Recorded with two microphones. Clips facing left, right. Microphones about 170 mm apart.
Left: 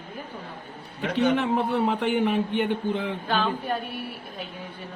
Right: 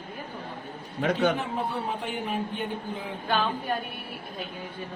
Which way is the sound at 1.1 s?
70° left (ahead or behind).